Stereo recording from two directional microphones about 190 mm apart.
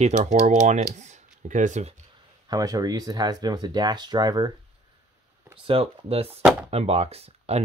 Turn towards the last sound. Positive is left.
turn(degrees=-30)  # may be behind; listen again after turning